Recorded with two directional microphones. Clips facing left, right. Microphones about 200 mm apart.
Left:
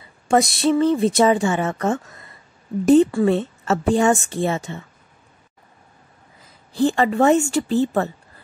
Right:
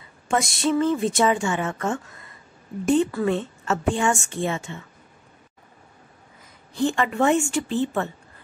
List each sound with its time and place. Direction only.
0.3 s a woman's voice: 35° left (ahead or behind)
6.7 s a woman's voice: 35° left (ahead or behind)